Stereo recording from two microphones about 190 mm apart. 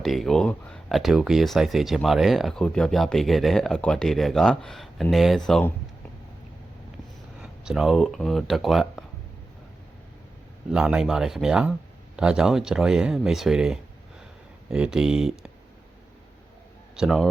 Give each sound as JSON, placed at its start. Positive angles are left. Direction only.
{"t": 0.0, "sound": "speech", "side_deg": 0}
{"t": 7.4, "sound": "speech", "side_deg": 0}
{"t": 10.7, "sound": "speech", "side_deg": -5}
{"t": 17.0, "sound": "speech", "side_deg": 0}